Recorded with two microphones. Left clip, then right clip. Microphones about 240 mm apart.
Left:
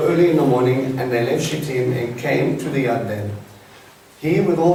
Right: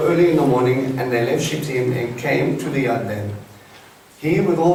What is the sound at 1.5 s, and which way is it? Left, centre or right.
Speech, left.